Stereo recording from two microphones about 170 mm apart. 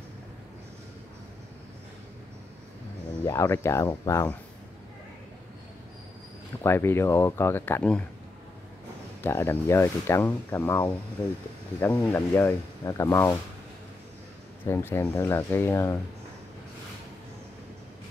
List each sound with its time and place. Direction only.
3.3 s speech: 15° left (ahead or behind)
6.6 s speech: 15° left (ahead or behind)
9.2 s speech: 15° left (ahead or behind)
14.6 s speech: 15° left (ahead or behind)